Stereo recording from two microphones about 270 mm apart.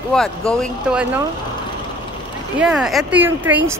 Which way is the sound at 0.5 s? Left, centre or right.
Centre.